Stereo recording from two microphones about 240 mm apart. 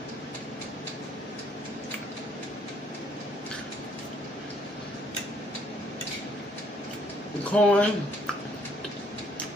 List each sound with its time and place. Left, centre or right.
7.5 s speech: centre